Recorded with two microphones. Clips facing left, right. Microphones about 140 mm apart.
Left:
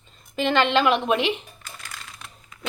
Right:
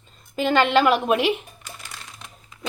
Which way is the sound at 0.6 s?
5° right (ahead or behind).